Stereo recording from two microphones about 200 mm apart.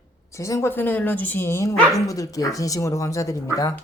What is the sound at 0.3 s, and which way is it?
Speech, 15° left (ahead or behind).